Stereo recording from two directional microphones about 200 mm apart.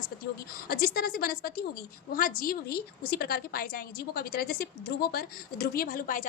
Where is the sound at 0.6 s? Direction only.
50° left (ahead or behind).